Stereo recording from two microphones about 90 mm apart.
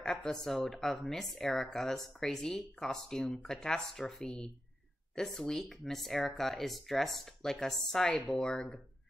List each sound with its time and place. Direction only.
0.0 s a woman's voice: 5° left (ahead or behind)